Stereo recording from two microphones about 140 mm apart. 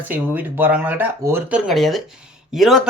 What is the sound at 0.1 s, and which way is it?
Speech, 10° right (ahead or behind).